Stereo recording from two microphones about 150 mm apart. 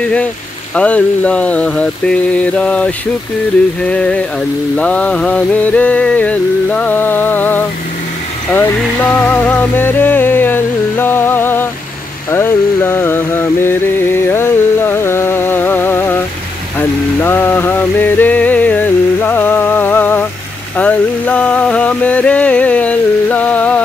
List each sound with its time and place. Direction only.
0.7 s music: 10° left (ahead or behind)
12.3 s mantra: 15° left (ahead or behind)
16.7 s a sound: 15° left (ahead or behind)
20.7 s music: 10° left (ahead or behind)